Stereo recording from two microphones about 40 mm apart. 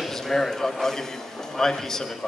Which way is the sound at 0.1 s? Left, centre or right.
Centre.